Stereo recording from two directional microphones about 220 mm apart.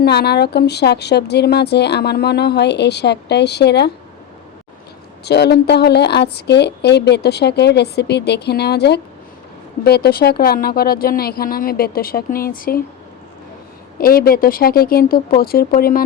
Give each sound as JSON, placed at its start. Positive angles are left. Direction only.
{"t": 0.0, "sound": "speech", "side_deg": 45}
{"t": 5.2, "sound": "speech", "side_deg": 50}
{"t": 14.0, "sound": "speech", "side_deg": 40}